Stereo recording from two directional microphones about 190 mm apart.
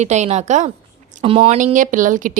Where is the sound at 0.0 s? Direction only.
40° right (ahead or behind).